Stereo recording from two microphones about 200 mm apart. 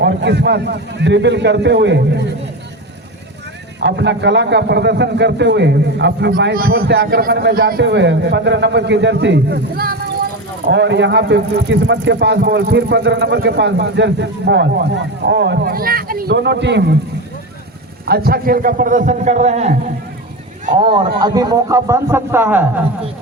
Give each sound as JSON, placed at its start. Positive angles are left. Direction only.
{"t": 0.0, "sound": "speech", "side_deg": -60}
{"t": 3.8, "sound": "speech", "side_deg": -60}
{"t": 10.7, "sound": "speech", "side_deg": -60}
{"t": 18.0, "sound": "a man's voice", "side_deg": -50}